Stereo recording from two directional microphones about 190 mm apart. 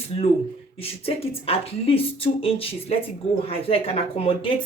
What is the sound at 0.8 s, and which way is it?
A woman's voice, 30° left (ahead or behind).